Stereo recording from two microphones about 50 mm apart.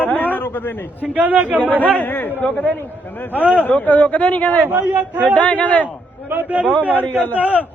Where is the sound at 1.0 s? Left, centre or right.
Right.